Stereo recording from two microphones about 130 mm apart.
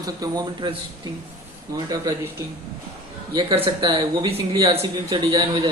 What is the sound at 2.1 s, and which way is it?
Speech, 30° right (ahead or behind).